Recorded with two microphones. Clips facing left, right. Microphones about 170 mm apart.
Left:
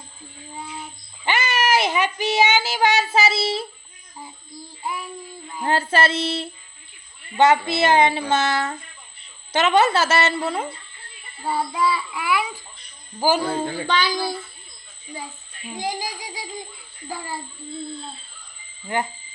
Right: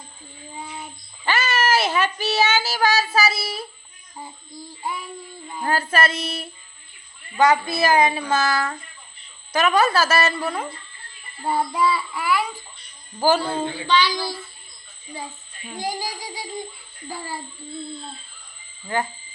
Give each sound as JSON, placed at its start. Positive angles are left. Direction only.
{"t": 1.2, "sound": "a child's voice", "side_deg": 15}
{"t": 5.6, "sound": "child singing", "side_deg": 25}
{"t": 11.4, "sound": "child singing", "side_deg": 0}
{"t": 13.1, "sound": "speech", "side_deg": 10}
{"t": 13.8, "sound": "a child's voice", "side_deg": 50}
{"t": 15.6, "sound": "speech", "side_deg": 15}